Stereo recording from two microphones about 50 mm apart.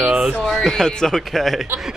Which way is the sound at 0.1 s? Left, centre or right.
Right.